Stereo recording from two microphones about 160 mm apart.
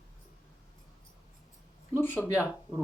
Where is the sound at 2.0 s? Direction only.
15° left (ahead or behind).